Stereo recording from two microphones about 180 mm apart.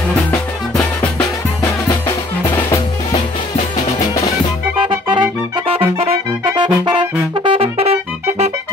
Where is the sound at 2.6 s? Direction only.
15° left (ahead or behind).